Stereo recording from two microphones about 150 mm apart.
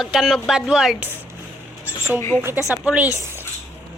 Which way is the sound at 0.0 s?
Centre (ahead or behind).